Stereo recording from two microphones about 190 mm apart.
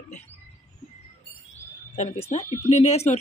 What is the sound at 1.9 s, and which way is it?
Speech, 35° left (ahead or behind).